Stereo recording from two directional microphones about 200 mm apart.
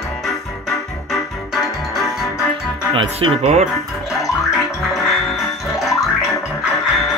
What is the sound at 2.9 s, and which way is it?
Speech, 30° right (ahead or behind).